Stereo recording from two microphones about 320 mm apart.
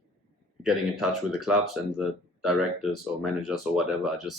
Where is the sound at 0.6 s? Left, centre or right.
Centre.